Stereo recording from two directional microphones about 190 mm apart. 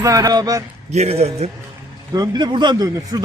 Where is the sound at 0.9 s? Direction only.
35° right (ahead or behind).